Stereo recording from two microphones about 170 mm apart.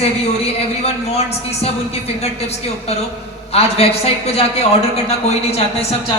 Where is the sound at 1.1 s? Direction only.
35° left (ahead or behind).